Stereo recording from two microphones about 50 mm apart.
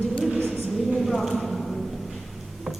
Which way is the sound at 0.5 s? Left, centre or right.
Centre.